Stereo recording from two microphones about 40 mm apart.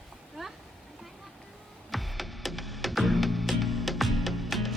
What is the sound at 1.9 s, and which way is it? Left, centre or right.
Music, centre.